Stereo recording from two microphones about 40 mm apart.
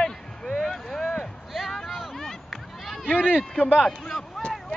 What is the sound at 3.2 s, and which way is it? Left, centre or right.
Speech, right.